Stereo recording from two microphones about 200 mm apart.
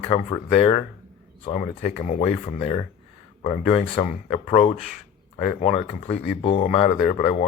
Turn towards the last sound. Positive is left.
turn(degrees=30)  # may be behind; listen again after turning